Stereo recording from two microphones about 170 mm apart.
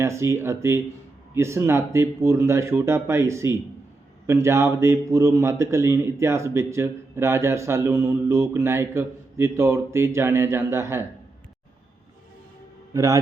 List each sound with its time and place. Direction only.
0.0 s a man's voice: 15° right (ahead or behind)
12.9 s a man's voice: 20° right (ahead or behind)